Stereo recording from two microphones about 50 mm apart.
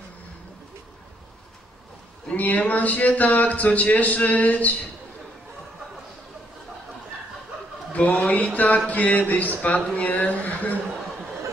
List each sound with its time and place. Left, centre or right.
2.2 s a man's voice: left
7.9 s a man's voice: left